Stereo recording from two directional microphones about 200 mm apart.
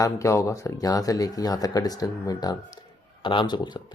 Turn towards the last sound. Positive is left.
turn(degrees=20)  # may be behind; listen again after turning